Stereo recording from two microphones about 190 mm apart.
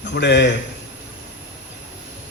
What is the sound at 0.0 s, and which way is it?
Speech, 65° left (ahead or behind).